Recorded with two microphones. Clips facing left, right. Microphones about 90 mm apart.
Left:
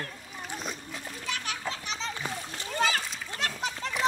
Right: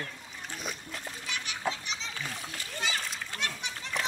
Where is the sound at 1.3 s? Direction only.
45° left (ahead or behind).